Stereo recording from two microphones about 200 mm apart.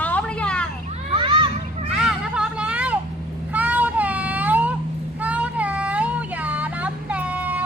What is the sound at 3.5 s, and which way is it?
Child singing, 10° right (ahead or behind).